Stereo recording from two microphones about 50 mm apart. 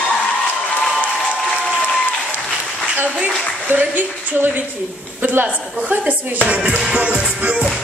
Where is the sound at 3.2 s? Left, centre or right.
Right.